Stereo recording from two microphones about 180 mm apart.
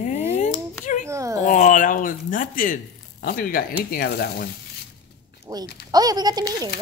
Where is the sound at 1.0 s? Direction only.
15° right (ahead or behind).